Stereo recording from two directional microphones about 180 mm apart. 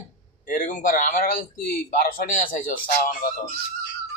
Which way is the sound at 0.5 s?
50° left (ahead or behind).